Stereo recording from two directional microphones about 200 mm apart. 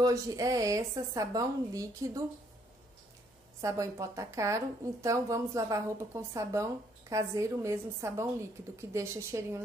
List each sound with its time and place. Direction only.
0.0 s speech: 20° right (ahead or behind)
3.6 s speech: 15° right (ahead or behind)